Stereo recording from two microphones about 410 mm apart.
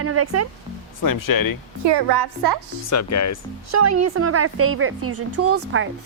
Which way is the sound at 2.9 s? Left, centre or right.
Left.